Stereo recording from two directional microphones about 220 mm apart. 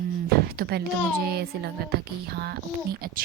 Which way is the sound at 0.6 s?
45° right (ahead or behind).